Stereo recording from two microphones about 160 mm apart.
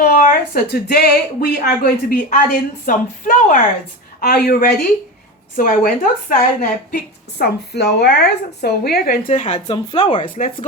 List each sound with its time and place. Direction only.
0.0 s a woman's voice: 60° left (ahead or behind)
4.4 s a woman's voice: 70° left (ahead or behind)
5.5 s a woman's voice: 60° left (ahead or behind); by 9.1 s 80° left
9.3 s speech: 45° left (ahead or behind)
9.7 s speech: 30° left (ahead or behind)
10.2 s speech: 55° left (ahead or behind)